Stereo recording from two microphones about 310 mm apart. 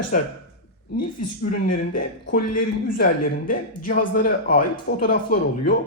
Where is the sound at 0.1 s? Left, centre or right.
Left.